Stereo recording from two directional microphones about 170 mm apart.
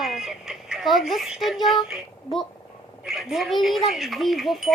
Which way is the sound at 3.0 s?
Centre (ahead or behind).